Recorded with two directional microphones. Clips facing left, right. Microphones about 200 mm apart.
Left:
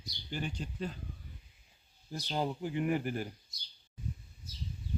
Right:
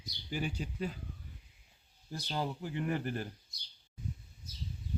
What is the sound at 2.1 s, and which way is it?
Speech, 20° left (ahead or behind).